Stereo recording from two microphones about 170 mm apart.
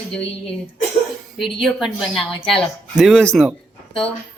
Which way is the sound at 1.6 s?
Centre (ahead or behind).